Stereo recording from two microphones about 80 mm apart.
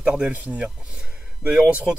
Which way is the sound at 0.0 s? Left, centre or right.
Centre.